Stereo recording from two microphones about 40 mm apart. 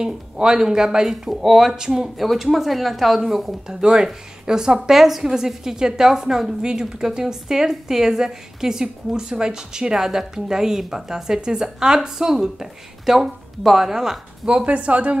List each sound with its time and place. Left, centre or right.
0.0 s a woman's voice: centre
2.2 s speech: centre
3.6 s a woman's voice: centre
14.4 s a woman's voice: right